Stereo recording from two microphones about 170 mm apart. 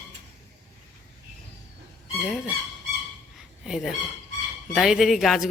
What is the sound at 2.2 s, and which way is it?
Speech, centre (ahead or behind).